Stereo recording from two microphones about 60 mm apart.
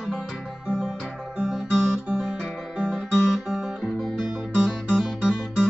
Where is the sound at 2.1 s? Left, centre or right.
Centre.